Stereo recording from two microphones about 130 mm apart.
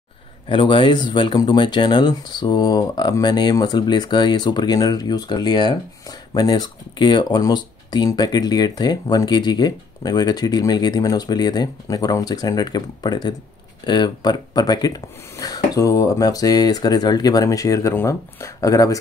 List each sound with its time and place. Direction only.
0.5 s speech: 40° left (ahead or behind)